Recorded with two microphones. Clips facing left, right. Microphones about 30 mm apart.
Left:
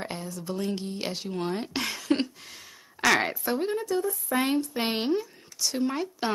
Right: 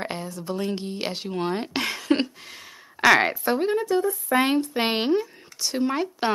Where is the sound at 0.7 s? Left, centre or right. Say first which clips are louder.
Right 3 dB; right.